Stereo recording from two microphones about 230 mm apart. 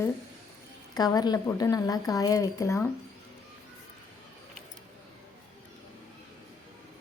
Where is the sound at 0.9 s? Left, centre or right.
Centre.